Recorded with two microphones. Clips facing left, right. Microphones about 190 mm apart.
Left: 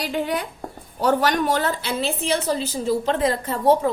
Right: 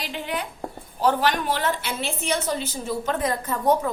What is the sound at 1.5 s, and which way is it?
A woman's voice, 35° left (ahead or behind).